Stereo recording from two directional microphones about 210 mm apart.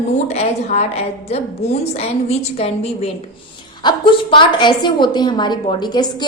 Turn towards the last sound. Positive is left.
turn(degrees=20)  # may be behind; listen again after turning